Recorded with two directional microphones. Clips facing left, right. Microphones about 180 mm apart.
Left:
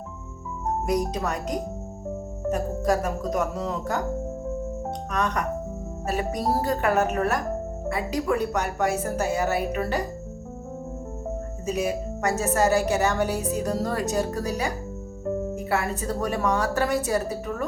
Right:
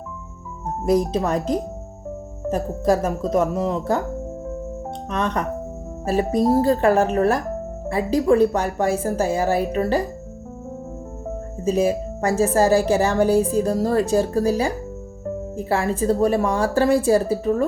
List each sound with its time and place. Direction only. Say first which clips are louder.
0.9 s a woman's voice: right 8 dB; 25° right (ahead or behind)
5.1 s a woman's voice: right 3 dB; 25° right (ahead or behind)
11.6 s a woman's voice: right 7 dB; 30° right (ahead or behind)